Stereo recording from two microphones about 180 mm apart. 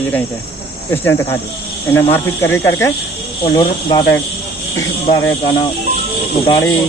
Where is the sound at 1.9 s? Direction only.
10° left (ahead or behind).